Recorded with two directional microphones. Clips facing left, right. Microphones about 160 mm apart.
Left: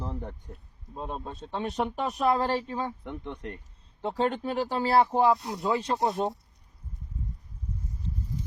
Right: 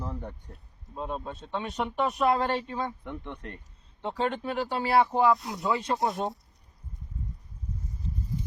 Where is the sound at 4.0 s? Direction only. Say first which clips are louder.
Left 2 dB; 40° left (ahead or behind).